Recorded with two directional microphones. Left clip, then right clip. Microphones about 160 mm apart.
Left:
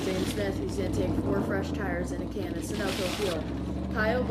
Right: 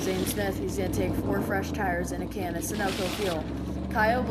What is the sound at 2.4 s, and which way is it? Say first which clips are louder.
Speech: right 4 dB; centre (ahead or behind).